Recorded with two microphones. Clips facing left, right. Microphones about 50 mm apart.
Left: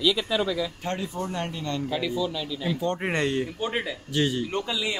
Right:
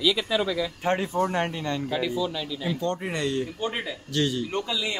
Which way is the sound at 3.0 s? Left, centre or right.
Left.